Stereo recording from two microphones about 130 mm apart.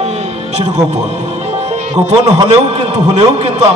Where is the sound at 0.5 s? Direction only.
55° right (ahead or behind).